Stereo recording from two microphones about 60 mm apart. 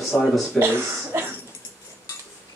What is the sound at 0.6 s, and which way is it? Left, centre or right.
Speech, right.